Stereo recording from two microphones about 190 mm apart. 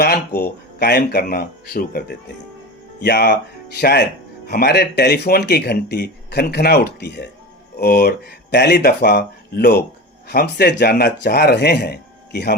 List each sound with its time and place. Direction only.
0.0 s speech: 55° left (ahead or behind)